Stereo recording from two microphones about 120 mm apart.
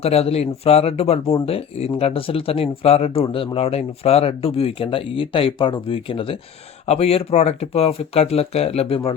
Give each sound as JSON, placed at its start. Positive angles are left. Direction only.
{"t": 0.0, "sound": "speech", "side_deg": 60}
{"t": 6.8, "sound": "speech", "side_deg": 60}